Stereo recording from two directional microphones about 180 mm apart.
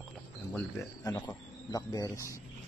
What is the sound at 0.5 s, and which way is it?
Speech, 15° left (ahead or behind).